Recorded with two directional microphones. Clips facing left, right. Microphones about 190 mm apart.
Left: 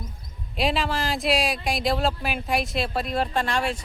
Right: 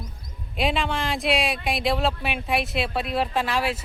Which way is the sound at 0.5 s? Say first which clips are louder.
Even; centre (ahead or behind).